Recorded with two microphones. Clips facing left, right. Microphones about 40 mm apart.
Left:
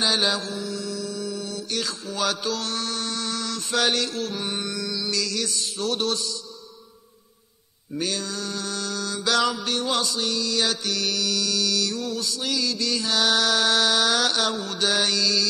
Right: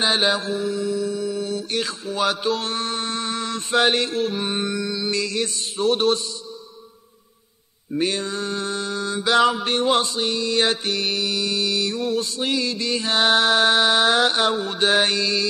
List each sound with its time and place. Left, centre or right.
0.0 s mantra: right
8.0 s mantra: right